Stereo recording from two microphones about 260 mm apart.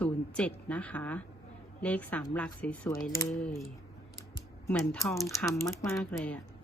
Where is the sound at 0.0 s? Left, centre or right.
Centre.